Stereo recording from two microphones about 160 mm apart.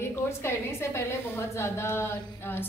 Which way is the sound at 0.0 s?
15° left (ahead or behind).